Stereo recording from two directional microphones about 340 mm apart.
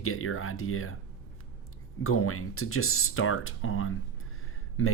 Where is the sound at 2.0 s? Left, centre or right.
Left.